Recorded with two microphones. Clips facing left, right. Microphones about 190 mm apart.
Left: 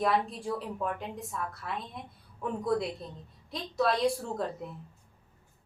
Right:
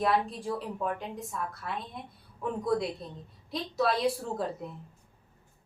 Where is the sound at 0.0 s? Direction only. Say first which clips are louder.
Right 1 dB; centre (ahead or behind).